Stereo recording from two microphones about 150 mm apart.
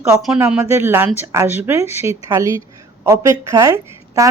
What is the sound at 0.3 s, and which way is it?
Speech, 15° right (ahead or behind).